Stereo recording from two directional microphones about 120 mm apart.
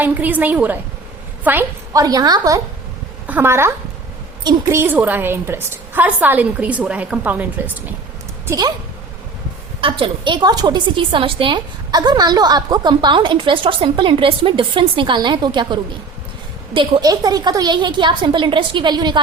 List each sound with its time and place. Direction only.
0.0 s a woman's voice: 15° right (ahead or behind)
1.9 s a woman's voice: 30° right (ahead or behind)
3.2 s a woman's voice: 15° right (ahead or behind)
8.4 s a woman's voice: 30° right (ahead or behind)
9.8 s a woman's voice: 45° right (ahead or behind)
17.0 s a woman's voice: 30° right (ahead or behind)